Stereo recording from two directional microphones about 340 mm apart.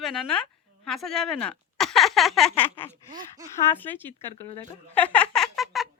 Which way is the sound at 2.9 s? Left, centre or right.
Centre.